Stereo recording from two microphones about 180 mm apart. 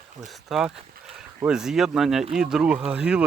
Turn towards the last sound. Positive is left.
turn(degrees=-5)  # may be behind; listen again after turning